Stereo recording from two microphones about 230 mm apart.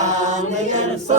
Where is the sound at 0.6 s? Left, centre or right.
Right.